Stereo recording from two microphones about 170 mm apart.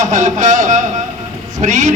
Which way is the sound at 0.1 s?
45° right (ahead or behind).